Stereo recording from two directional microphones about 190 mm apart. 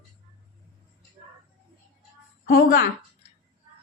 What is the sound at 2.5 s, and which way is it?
Speech, 50° left (ahead or behind).